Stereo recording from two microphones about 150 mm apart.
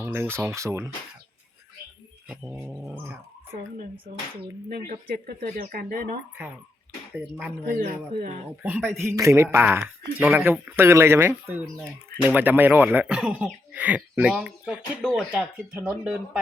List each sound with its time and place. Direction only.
0.0 s speech: 15° right (ahead or behind)
4.9 s speech: 75° right (ahead or behind)
7.2 s speech: 5° right (ahead or behind)
8.6 s speech: 10° right (ahead or behind)